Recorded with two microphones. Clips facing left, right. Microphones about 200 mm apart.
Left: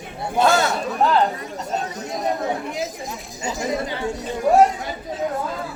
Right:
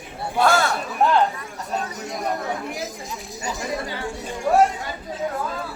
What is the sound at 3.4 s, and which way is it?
Speech, 20° left (ahead or behind).